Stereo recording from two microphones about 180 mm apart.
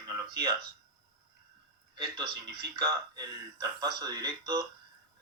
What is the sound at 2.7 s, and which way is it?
Speech, 20° right (ahead or behind).